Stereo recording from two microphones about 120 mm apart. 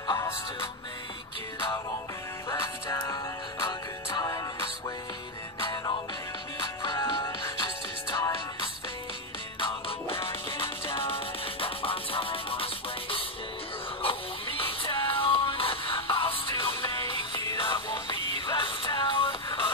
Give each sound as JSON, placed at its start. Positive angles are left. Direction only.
{"t": 2.5, "sound": "music", "side_deg": 25}
{"t": 5.6, "sound": "music", "side_deg": 35}
{"t": 9.6, "sound": "music", "side_deg": 50}